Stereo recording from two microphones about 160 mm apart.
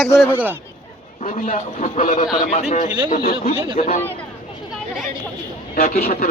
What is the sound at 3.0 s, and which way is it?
Speech, 65° left (ahead or behind).